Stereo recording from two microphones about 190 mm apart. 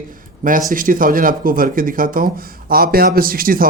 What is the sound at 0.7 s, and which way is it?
Speech, 45° right (ahead or behind).